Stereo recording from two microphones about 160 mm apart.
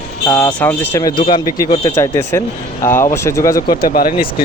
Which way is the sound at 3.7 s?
65° left (ahead or behind).